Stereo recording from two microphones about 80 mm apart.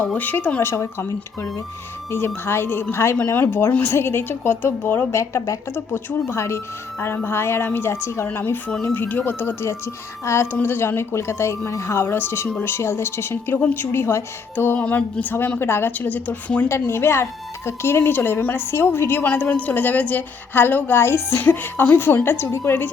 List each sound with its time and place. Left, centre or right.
0.0 s a woman's voice: left
0.6 s a woman's voice: left
16.6 s a woman's voice: left